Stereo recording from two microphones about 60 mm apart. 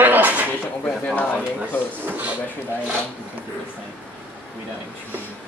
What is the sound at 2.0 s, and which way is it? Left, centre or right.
Speech, right.